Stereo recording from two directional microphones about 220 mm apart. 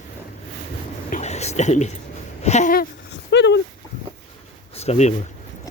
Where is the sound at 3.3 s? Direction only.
50° left (ahead or behind).